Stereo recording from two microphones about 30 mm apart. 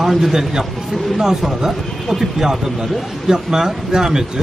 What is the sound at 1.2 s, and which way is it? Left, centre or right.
Speech, centre.